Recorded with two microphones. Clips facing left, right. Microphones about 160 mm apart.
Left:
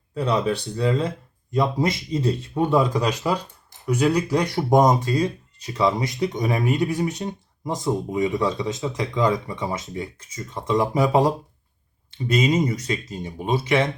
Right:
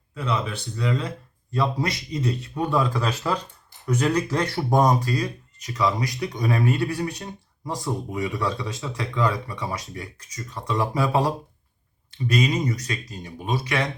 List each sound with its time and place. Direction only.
0.1 s speech: 35° left (ahead or behind)